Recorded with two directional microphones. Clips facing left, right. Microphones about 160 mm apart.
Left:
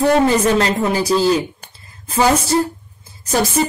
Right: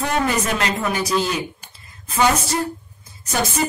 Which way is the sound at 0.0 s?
35° left (ahead or behind).